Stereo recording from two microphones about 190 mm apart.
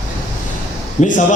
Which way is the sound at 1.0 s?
40° left (ahead or behind).